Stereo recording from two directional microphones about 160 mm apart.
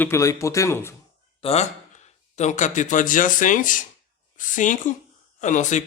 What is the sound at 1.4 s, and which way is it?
A man's voice, 45° left (ahead or behind).